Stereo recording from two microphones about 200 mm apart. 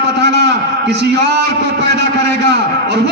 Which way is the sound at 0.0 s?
55° right (ahead or behind).